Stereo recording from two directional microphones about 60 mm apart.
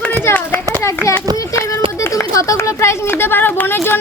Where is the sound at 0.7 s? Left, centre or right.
Right.